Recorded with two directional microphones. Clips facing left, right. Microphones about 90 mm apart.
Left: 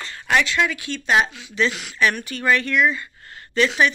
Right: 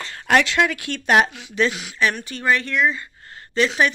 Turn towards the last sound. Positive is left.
turn(degrees=-30)  # may be behind; listen again after turning